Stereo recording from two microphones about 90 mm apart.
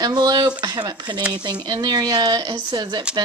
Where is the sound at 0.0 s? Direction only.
50° right (ahead or behind).